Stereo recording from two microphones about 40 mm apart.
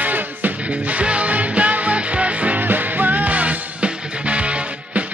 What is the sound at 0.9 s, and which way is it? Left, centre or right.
Music, right.